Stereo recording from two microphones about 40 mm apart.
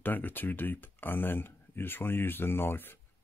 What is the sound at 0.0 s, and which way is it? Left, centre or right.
Speech, left.